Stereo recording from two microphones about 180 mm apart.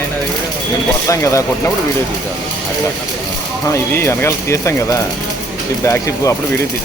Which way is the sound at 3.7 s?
15° left (ahead or behind).